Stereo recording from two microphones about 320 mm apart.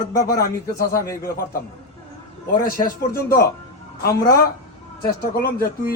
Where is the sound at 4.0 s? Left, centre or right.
Left.